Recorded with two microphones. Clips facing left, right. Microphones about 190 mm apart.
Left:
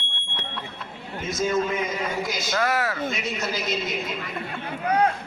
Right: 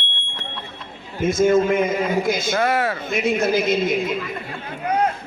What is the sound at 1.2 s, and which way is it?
A man's voice, 50° right (ahead or behind).